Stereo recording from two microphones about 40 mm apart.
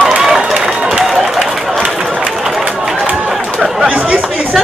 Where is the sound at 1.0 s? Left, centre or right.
Centre.